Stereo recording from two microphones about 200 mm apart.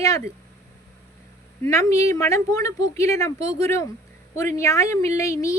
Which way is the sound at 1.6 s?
15° left (ahead or behind).